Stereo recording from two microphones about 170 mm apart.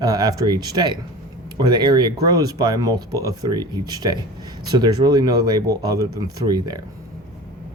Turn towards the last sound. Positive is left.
turn(degrees=-25)  # may be behind; listen again after turning